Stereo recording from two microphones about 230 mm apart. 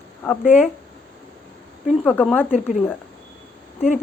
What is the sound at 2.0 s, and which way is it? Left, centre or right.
Speech, centre.